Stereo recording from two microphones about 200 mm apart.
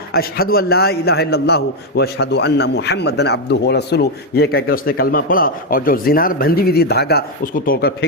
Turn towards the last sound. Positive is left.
turn(degrees=50)  # may be behind; listen again after turning